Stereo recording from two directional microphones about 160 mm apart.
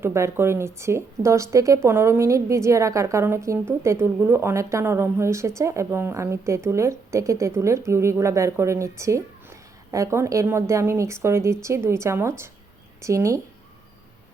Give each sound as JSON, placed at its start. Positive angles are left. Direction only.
{"t": 0.0, "sound": "a woman's voice", "side_deg": -15}